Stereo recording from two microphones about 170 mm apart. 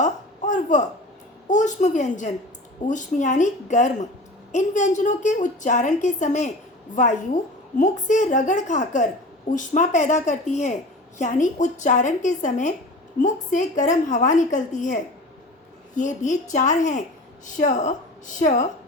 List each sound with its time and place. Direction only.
0.0 s a sound: 45° left (ahead or behind)
1.5 s a woman's voice: 45° left (ahead or behind)
16.0 s a woman's voice: 45° left (ahead or behind)